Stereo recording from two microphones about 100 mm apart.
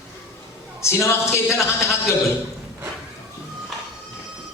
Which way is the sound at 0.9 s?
30° left (ahead or behind).